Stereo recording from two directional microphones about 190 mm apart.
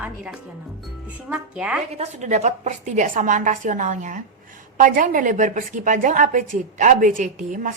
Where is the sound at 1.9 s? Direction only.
35° right (ahead or behind).